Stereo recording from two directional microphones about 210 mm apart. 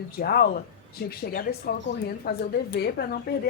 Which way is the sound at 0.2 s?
45° left (ahead or behind).